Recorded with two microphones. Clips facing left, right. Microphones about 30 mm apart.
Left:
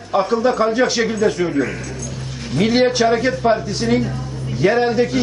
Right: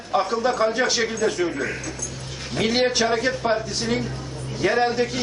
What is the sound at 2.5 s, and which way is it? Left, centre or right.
A man's voice, centre.